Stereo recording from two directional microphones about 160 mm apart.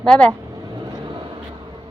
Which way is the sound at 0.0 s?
5° left (ahead or behind).